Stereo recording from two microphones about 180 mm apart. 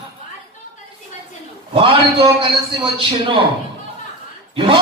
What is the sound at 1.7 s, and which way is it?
Speech, 30° right (ahead or behind).